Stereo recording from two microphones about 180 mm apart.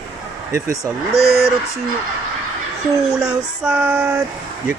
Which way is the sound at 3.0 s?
5° right (ahead or behind).